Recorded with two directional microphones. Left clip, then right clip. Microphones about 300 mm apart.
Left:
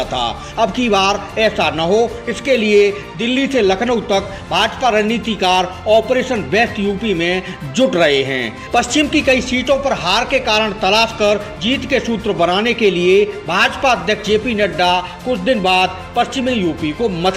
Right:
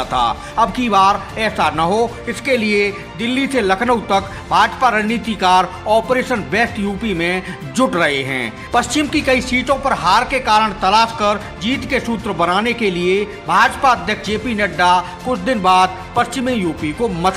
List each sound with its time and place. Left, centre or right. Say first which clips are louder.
0.0 s speech: right 2 dB; centre